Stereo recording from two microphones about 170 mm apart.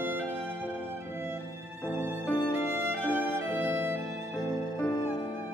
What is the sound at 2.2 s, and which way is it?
Music, 10° left (ahead or behind).